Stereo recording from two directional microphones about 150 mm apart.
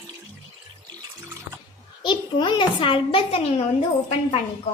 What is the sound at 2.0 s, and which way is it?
A child's voice, 30° left (ahead or behind).